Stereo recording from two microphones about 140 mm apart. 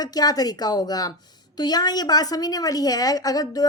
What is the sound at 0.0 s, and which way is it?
A woman's voice, 30° left (ahead or behind).